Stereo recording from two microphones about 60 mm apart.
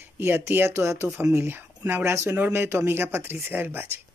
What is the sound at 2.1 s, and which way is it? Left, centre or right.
Speech, right.